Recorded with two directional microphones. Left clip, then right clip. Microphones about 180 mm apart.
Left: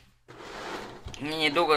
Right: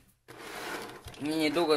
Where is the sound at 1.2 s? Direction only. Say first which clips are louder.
Left 3 dB; 45° right (ahead or behind).